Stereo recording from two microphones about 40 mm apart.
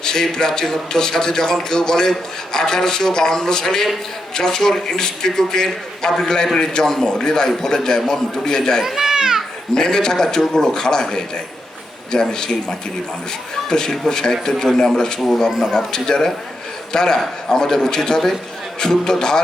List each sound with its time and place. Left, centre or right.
0.0 s a man's voice: centre
8.8 s children playing: centre
9.7 s a man's voice: centre
13.7 s a man's voice: centre